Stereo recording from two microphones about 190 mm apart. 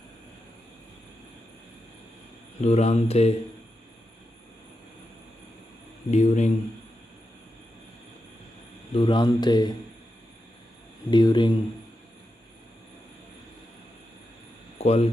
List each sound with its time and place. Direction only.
2.6 s speech: 35° left (ahead or behind)
6.0 s speech: 40° left (ahead or behind)
8.9 s speech: 25° left (ahead or behind)
11.1 s speech: 25° left (ahead or behind)
14.8 s speech: 35° left (ahead or behind)